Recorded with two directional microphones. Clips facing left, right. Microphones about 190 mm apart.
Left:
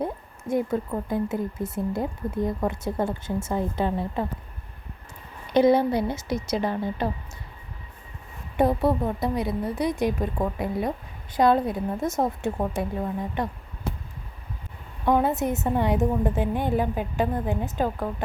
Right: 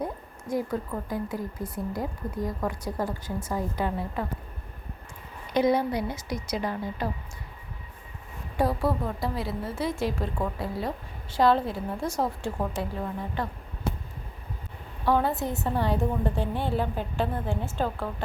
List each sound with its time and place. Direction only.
0.0 s a woman's voice: 25° left (ahead or behind)
5.5 s a woman's voice: 30° left (ahead or behind)
8.5 s a woman's voice: 20° left (ahead or behind)
15.0 s a woman's voice: 20° left (ahead or behind)